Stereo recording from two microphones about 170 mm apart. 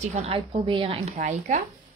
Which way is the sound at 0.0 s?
40° right (ahead or behind).